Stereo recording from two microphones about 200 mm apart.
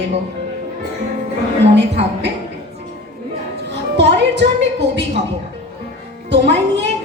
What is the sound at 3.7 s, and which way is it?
Music, 60° right (ahead or behind).